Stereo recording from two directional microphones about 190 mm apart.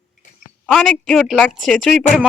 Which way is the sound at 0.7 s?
5° left (ahead or behind).